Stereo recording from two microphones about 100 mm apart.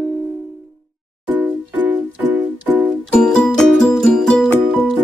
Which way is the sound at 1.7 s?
15° right (ahead or behind).